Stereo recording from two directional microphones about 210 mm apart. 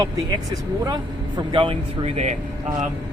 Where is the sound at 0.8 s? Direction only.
20° right (ahead or behind).